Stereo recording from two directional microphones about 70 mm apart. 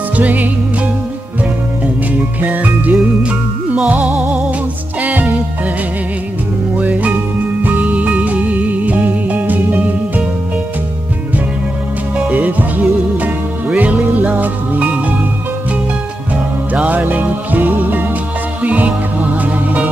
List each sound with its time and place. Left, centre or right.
0.1 s music: right
2.4 s music: right
6.8 s music: right
12.3 s music: right
16.8 s music: right